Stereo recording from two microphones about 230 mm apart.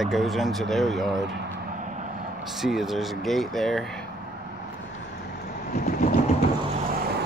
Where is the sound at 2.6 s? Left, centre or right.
Centre.